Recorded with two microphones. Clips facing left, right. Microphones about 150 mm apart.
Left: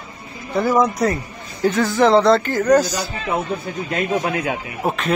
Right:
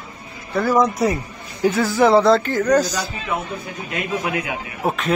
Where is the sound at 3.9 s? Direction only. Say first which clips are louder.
Left 3 dB; 40° left (ahead or behind).